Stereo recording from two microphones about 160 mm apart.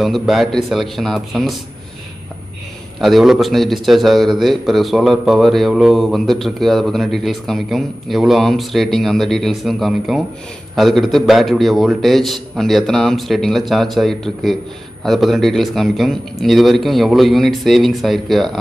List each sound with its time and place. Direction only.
0.0 s a man's voice: centre (ahead or behind)
3.0 s a man's voice: centre (ahead or behind)